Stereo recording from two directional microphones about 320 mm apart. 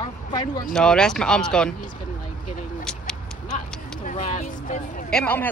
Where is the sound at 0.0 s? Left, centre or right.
Centre.